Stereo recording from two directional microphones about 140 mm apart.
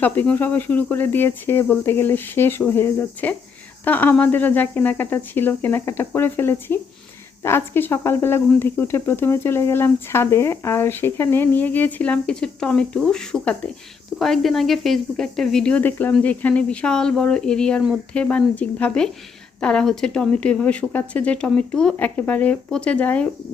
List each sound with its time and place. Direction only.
0.0 s speech: 10° left (ahead or behind)